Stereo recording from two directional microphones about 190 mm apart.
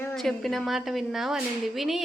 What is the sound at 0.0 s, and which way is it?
Speech, 5° left (ahead or behind).